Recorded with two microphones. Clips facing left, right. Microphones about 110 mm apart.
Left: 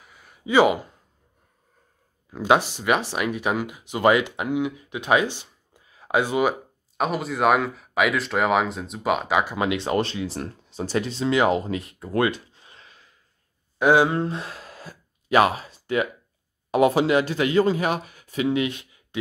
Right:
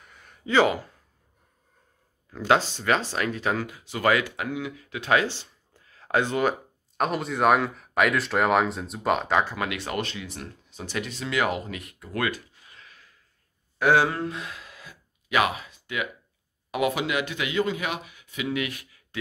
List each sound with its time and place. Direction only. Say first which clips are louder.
0.0 s a sound: left 2 dB; 5° left (ahead or behind)
2.3 s speech: left 2 dB; 15° left (ahead or behind)
9.6 s speech: left 6 dB; 25° left (ahead or behind)
14.2 s gasp: left 3 dB; 35° left (ahead or behind)
16.7 s speech: left 7 dB; 35° left (ahead or behind)